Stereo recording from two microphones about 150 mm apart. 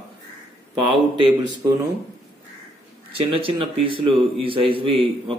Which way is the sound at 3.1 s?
35° right (ahead or behind).